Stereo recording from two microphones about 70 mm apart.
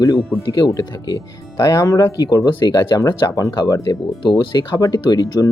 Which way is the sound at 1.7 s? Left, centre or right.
Left.